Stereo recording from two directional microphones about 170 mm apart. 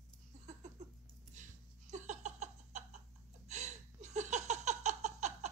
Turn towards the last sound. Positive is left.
turn(degrees=-40)  # may be behind; listen again after turning